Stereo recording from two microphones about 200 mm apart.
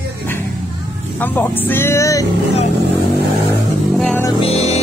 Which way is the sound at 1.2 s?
10° left (ahead or behind).